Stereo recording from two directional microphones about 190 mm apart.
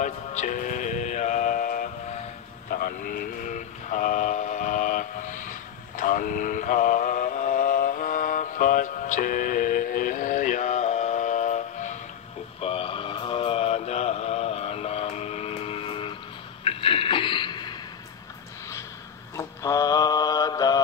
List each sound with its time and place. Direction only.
0.0 s music: 40° left (ahead or behind)
2.7 s vehicle: 50° left (ahead or behind)
12.5 s mantra: 30° left (ahead or behind)
16.6 s a sound: 30° left (ahead or behind)
19.3 s mantra: 15° left (ahead or behind)